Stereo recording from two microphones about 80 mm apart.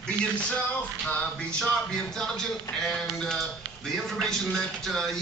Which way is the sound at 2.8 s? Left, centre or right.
Centre.